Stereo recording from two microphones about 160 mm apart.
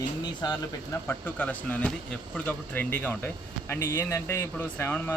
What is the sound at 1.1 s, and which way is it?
Speech, 10° left (ahead or behind).